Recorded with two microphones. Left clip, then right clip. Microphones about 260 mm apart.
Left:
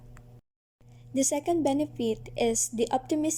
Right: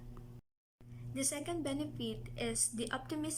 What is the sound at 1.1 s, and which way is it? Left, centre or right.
A woman's voice, centre.